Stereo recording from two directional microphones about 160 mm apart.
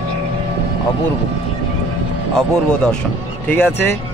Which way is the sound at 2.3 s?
5° left (ahead or behind).